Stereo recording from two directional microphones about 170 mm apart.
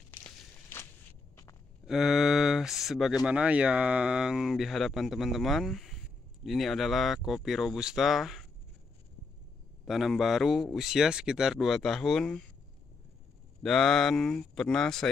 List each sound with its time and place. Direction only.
0.1 s walk: 10° left (ahead or behind)
1.9 s speech: centre (ahead or behind)
9.8 s speech: centre (ahead or behind)
13.6 s speech: 5° left (ahead or behind)